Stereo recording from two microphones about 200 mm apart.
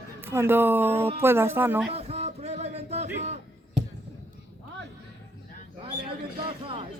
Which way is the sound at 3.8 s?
60° right (ahead or behind).